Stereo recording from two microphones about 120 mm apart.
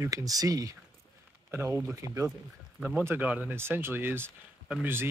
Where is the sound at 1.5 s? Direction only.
20° right (ahead or behind).